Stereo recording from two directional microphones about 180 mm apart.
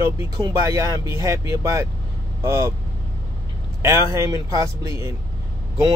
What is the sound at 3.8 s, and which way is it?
A man's voice, 15° right (ahead or behind).